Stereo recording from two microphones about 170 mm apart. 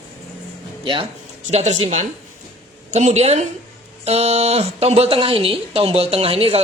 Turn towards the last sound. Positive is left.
turn(degrees=-35)  # may be behind; listen again after turning